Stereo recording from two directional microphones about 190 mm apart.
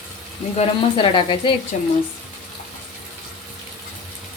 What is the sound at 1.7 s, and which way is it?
Speech, 40° left (ahead or behind).